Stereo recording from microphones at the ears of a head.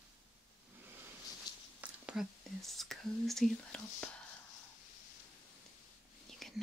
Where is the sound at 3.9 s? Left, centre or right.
Left.